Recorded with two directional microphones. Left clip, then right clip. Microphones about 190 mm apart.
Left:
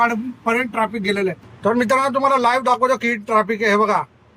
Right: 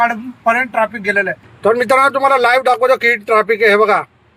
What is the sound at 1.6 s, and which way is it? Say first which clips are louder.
A man's voice: right 6 dB; 15° right (ahead or behind).